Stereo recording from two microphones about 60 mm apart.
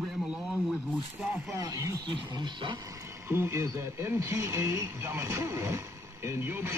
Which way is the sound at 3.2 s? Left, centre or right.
Right.